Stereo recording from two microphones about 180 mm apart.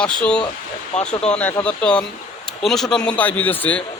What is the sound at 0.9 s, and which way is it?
Speech, 35° left (ahead or behind).